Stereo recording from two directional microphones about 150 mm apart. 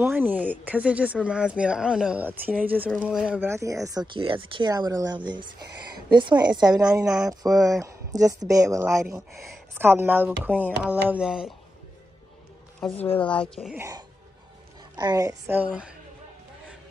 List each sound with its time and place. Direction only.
0.0 s speech: 10° right (ahead or behind)
3.3 s speech: 15° right (ahead or behind)
4.1 s speech: 35° right (ahead or behind); by 11.5 s 5° right (ahead or behind)
13.2 s speech: 5° left (ahead or behind)
13.7 s speech: 20° right (ahead or behind)
15.4 s speech: 10° right (ahead or behind)